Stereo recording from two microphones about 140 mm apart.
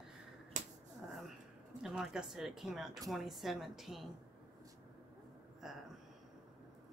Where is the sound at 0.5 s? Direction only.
60° right (ahead or behind).